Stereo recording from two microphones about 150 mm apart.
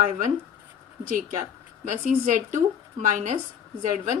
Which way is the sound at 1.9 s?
60° right (ahead or behind).